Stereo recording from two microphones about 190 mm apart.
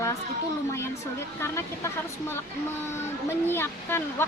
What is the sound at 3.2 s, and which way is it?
Speech, 10° left (ahead or behind).